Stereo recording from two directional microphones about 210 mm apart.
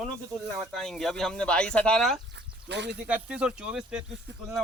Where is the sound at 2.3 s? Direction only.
55° right (ahead or behind).